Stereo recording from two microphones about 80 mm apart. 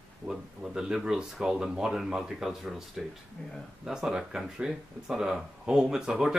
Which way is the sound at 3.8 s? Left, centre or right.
Centre.